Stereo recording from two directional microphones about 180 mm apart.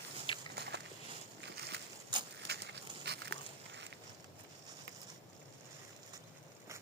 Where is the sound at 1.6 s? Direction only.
65° right (ahead or behind).